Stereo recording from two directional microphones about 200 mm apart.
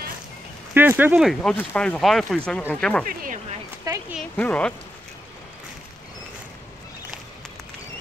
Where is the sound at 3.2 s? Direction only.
40° right (ahead or behind).